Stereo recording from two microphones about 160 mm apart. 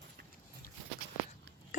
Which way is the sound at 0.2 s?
90° right.